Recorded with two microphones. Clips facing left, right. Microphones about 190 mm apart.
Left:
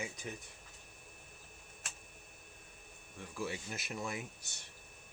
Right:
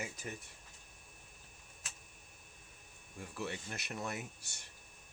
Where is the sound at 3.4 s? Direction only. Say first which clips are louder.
Left 2 dB; 5° left (ahead or behind).